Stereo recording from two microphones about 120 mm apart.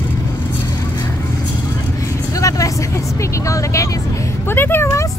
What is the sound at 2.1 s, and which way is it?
Vehicle, 30° left (ahead or behind).